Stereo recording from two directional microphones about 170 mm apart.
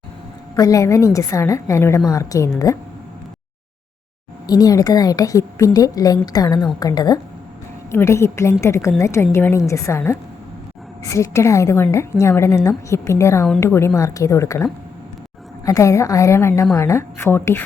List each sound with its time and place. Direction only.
0.5 s a woman's voice: 20° left (ahead or behind)
4.4 s a woman's voice: 20° left (ahead or behind)